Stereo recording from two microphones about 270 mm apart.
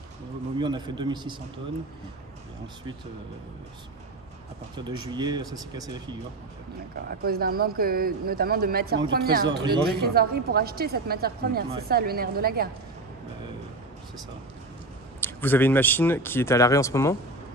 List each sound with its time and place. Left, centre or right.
0.6 s speech: centre
4.7 s speech: centre
7.1 s speech: right
9.0 s speech: centre
9.8 s speech: right
15.1 s speech: centre